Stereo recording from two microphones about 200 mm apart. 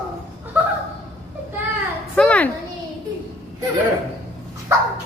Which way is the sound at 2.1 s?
5° left (ahead or behind).